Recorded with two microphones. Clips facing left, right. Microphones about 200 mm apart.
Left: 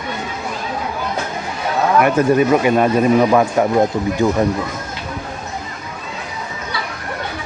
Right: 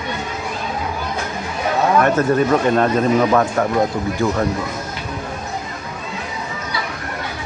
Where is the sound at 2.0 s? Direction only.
10° left (ahead or behind).